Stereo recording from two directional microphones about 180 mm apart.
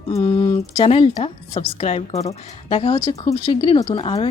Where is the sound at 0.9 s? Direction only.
35° left (ahead or behind).